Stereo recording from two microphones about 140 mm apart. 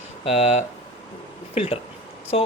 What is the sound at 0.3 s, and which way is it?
Speech, 50° left (ahead or behind).